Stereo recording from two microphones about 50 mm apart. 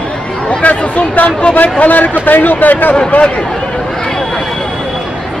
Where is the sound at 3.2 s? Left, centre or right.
Centre.